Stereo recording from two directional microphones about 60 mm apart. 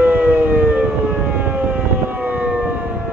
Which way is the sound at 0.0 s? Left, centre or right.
Right.